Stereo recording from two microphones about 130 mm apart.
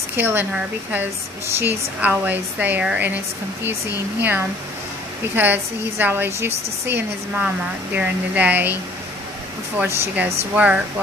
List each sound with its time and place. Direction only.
0.1 s speech: 15° right (ahead or behind)
4.2 s speech: 15° right (ahead or behind)
7.9 s speech: 15° right (ahead or behind)
9.8 s speech: 15° right (ahead or behind)